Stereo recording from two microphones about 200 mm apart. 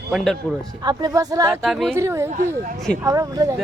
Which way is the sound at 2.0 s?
15° right (ahead or behind).